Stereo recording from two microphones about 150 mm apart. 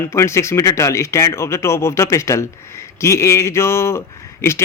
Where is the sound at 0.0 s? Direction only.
20° left (ahead or behind).